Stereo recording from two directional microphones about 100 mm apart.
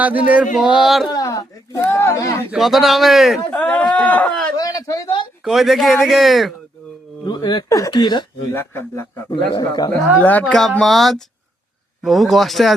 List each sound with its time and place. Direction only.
0.0 s a sound: 15° right (ahead or behind)
0.5 s speech: 5° right (ahead or behind)
1.0 s speech: 40° left (ahead or behind)
2.6 s speech: centre (ahead or behind)
3.5 s speech: 15° left (ahead or behind)
4.5 s speech: 40° left (ahead or behind)
5.5 s speech: centre (ahead or behind)
7.3 s speech: 45° left (ahead or behind)
8.5 s speech: 20° left (ahead or behind)
9.6 s speech: 40° left (ahead or behind)
10.2 s speech: 15° left (ahead or behind)
10.4 s speech: centre (ahead or behind)